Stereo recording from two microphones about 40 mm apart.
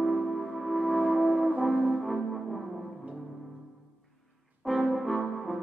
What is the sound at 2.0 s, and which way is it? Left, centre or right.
Music, centre.